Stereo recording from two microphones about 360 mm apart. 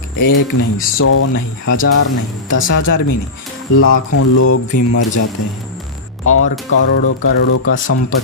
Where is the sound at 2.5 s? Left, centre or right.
Left.